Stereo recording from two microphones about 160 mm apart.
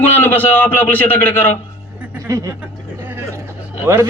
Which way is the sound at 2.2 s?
20° right (ahead or behind).